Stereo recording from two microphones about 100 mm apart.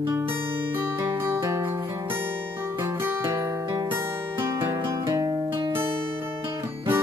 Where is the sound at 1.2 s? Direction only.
30° right (ahead or behind).